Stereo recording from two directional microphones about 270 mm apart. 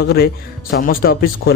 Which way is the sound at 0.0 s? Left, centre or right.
Left.